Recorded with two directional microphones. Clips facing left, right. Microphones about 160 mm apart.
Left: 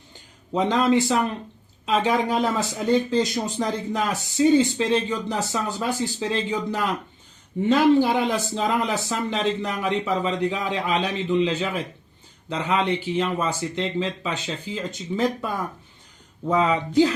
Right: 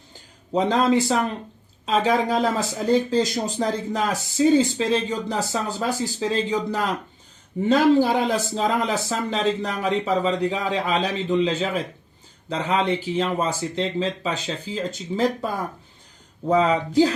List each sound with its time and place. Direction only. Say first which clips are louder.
0.5 s speech: right 1 dB; 35° right (ahead or behind)
16.5 s speech: right 2 dB; 35° right (ahead or behind)